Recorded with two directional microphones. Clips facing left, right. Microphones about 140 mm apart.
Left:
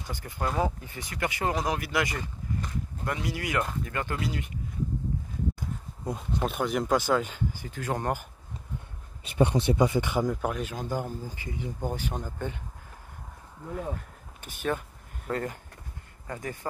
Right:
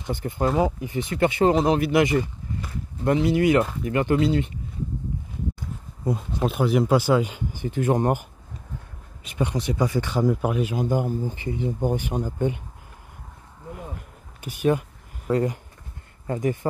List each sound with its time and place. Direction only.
0.0 s speech: 25° right (ahead or behind)
6.0 s speech: centre (ahead or behind); by 8.3 s 20° right (ahead or behind)
9.2 s speech: 30° left (ahead or behind); by 10.2 s 15° left (ahead or behind)
10.2 s speech: 5° right (ahead or behind)
11.3 s speech: 30° right (ahead or behind)
11.8 s speech: 15° right (ahead or behind)
14.4 s speech: 10° right (ahead or behind)